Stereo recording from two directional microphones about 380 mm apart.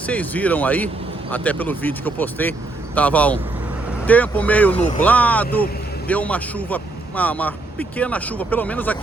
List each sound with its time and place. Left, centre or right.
0.1 s speech: centre
4.7 s speech: centre
5.0 s speech: centre